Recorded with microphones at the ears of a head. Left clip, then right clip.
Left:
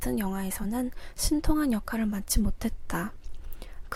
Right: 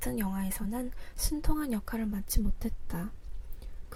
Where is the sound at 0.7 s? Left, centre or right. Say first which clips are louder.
Left 5 dB; left.